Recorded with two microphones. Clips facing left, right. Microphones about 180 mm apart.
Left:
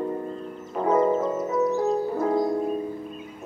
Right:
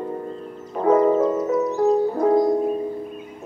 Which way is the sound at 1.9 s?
25° right (ahead or behind).